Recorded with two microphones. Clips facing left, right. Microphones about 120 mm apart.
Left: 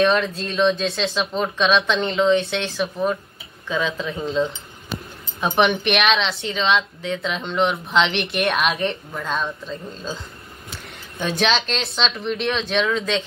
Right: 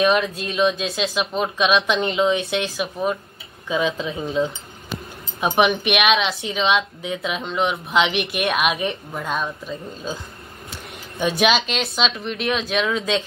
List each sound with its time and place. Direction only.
0.0 s speech: 10° right (ahead or behind)
3.6 s speech: 20° right (ahead or behind)
5.4 s speech: 10° right (ahead or behind)
11.1 s speech: 10° right (ahead or behind)